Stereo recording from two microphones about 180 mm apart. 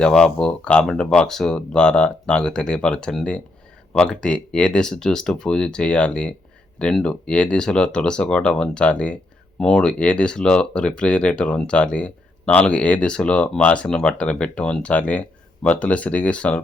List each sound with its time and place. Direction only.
0.0 s speech: 5° left (ahead or behind)